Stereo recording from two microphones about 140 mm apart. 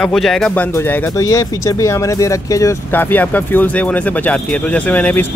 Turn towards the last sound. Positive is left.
turn(degrees=10)  # may be behind; listen again after turning